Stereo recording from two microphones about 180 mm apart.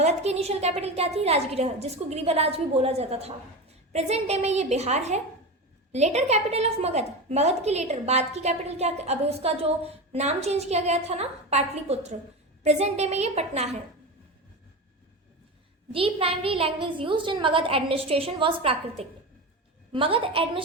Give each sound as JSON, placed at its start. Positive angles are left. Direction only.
{"t": 0.0, "sound": "a woman's voice", "side_deg": -35}
{"t": 15.9, "sound": "a woman's voice", "side_deg": -30}